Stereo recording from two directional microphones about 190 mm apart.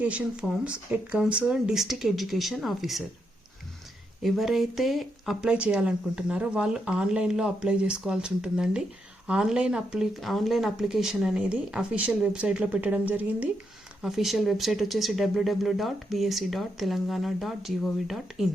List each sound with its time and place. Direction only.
0.0 s speech: 5° right (ahead or behind)
4.2 s speech: centre (ahead or behind)